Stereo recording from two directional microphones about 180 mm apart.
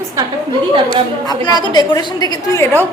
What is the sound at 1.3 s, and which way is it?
A woman's voice, 25° left (ahead or behind).